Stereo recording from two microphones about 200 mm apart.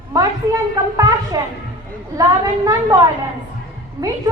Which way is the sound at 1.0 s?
20° right (ahead or behind).